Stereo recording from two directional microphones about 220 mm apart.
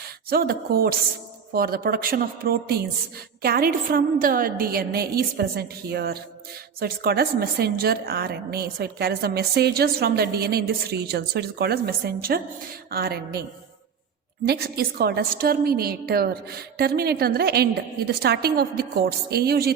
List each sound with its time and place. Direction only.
0.3 s a woman's voice: 45° right (ahead or behind)
14.4 s a woman's voice: 45° right (ahead or behind)